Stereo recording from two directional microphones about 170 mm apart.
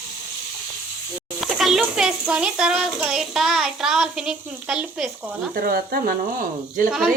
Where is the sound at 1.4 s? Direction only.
Centre (ahead or behind).